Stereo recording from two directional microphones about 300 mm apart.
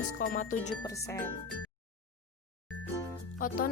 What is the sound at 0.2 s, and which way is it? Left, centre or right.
Speech, left.